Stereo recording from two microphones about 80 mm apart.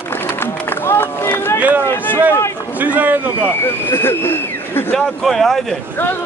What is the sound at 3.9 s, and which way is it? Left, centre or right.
Speech, left.